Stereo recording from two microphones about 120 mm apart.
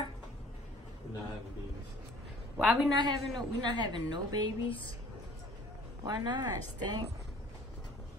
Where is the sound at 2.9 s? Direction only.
35° right (ahead or behind).